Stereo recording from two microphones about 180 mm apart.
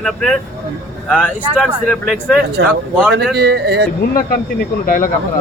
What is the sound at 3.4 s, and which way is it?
Speech, 65° right (ahead or behind).